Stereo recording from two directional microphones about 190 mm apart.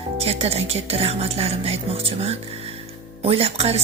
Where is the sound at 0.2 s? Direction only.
30° right (ahead or behind).